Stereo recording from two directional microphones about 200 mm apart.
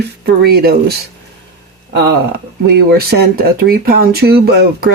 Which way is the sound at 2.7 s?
55° right (ahead or behind).